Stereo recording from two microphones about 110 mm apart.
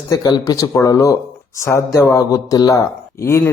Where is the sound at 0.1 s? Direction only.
35° left (ahead or behind).